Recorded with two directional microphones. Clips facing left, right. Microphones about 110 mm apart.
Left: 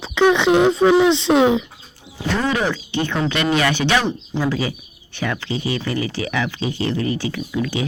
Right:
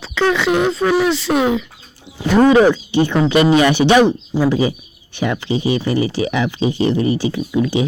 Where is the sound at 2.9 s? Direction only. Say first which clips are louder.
Right 7 dB; 15° right (ahead or behind).